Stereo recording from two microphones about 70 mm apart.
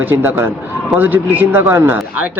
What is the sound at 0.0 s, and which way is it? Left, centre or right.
Speech, right.